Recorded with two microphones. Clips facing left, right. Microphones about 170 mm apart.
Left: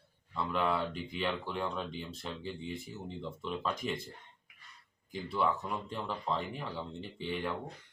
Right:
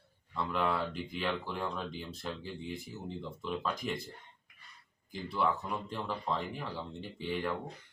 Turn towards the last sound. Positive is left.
turn(degrees=0)  # may be behind; listen again after turning